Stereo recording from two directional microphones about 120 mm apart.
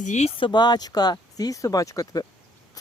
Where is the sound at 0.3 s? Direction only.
40° left (ahead or behind).